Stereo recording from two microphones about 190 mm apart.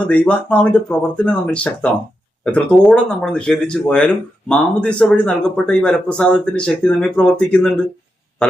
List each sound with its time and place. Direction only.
0.1 s speech: 5° left (ahead or behind)